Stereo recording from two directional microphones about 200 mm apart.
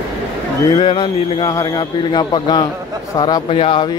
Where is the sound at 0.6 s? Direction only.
25° left (ahead or behind).